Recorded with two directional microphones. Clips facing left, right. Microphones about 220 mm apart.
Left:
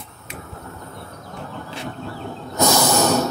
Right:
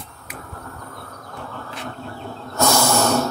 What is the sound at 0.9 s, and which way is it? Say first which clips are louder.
Train: left 1 dB; 25° left (ahead or behind).